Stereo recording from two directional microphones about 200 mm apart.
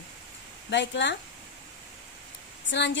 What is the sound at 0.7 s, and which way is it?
Speech, 60° left (ahead or behind).